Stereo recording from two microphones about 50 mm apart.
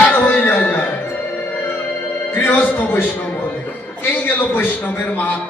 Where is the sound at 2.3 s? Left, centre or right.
Left.